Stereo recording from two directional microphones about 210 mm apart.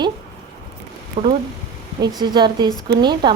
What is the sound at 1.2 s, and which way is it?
Speech, 25° right (ahead or behind).